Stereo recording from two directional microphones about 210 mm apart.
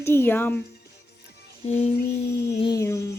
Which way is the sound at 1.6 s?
30° left (ahead or behind).